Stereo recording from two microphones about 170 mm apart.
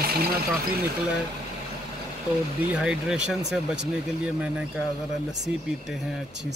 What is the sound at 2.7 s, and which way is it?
Speech, 5° right (ahead or behind).